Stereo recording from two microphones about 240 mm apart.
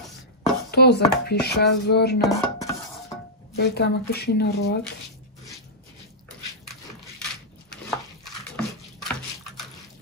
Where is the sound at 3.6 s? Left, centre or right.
Left.